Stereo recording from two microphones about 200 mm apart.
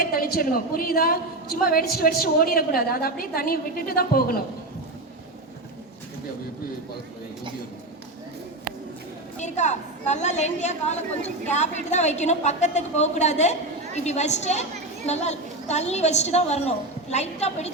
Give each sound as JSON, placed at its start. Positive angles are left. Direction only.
{"t": 0.0, "sound": "a woman's voice", "side_deg": 50}
{"t": 9.4, "sound": "a woman's voice", "side_deg": 35}